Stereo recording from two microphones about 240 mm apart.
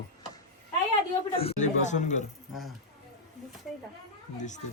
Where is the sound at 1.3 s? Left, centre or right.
Left.